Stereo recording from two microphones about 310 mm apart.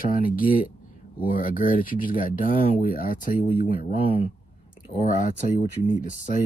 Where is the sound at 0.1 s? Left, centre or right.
Left.